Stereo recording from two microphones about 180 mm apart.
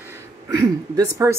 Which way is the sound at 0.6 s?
20° right (ahead or behind).